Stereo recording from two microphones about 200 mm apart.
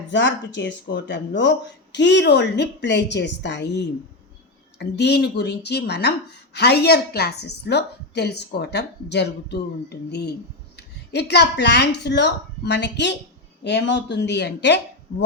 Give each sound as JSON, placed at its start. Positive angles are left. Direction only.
{"t": 0.1, "sound": "speech", "side_deg": 60}